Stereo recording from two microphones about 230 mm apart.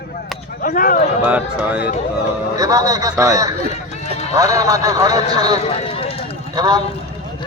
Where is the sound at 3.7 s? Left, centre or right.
Left.